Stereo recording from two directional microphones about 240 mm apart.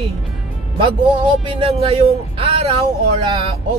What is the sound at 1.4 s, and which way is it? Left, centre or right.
Speech, right.